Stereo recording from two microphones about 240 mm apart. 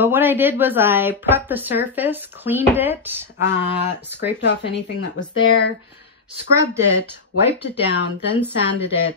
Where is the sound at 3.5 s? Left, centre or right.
Left.